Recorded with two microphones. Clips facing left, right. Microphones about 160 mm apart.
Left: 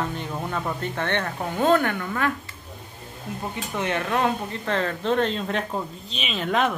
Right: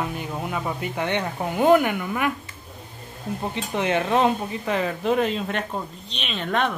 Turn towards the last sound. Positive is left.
turn(degrees=0)  # may be behind; listen again after turning